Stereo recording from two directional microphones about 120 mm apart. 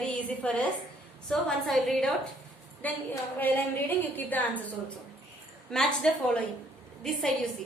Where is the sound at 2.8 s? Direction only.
15° left (ahead or behind).